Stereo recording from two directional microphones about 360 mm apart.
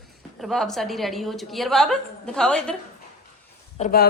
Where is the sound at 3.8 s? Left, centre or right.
Left.